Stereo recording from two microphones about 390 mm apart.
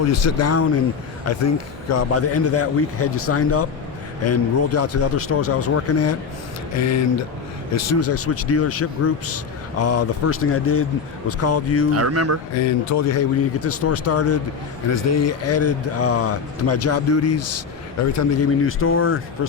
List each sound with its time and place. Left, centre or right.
0.1 s speech: left
11.9 s speech: right
12.5 s speech: left